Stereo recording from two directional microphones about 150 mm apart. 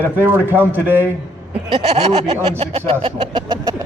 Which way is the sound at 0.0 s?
15° right (ahead or behind).